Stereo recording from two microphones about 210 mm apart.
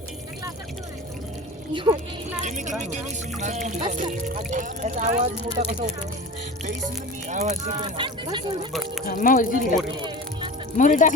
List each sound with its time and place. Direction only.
1.7 s speech: 25° right (ahead or behind)
2.4 s speech: 35° right (ahead or behind)
7.3 s speech: 35° right (ahead or behind)
7.8 s speech: 20° right (ahead or behind)
9.0 s speech: 40° left (ahead or behind)
10.8 s speech: 35° left (ahead or behind)